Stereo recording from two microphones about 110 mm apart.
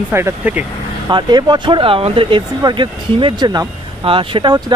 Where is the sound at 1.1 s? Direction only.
45° right (ahead or behind).